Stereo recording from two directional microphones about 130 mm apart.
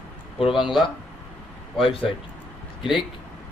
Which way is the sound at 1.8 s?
45° left (ahead or behind).